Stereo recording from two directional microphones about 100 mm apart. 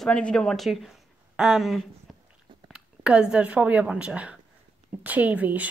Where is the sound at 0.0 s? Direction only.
10° left (ahead or behind).